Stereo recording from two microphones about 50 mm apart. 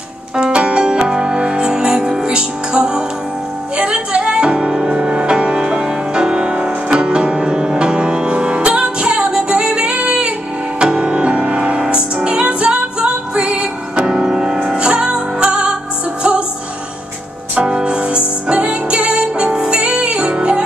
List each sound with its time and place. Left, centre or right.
0.4 s music: right
17.6 s music: centre